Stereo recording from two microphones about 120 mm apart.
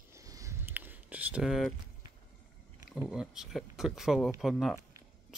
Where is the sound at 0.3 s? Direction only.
25° right (ahead or behind).